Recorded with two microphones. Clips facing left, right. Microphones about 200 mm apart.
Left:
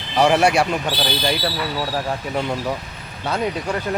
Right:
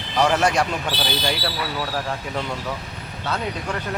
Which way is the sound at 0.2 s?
10° left (ahead or behind).